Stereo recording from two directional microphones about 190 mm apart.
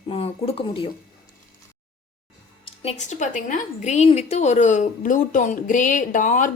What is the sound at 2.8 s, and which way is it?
A woman's voice, 35° left (ahead or behind).